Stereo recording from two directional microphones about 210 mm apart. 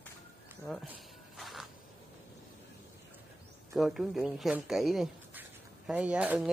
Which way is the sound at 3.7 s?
Centre (ahead or behind).